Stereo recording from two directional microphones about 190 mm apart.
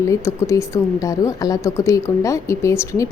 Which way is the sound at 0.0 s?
15° left (ahead or behind).